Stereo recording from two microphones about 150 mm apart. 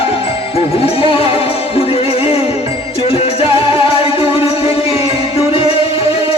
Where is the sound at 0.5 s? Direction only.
40° left (ahead or behind).